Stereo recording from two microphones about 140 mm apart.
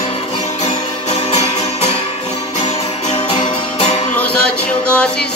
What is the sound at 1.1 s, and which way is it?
Music, 50° left (ahead or behind).